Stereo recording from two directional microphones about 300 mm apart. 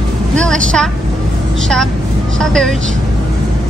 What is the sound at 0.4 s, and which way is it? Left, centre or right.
Speech, centre.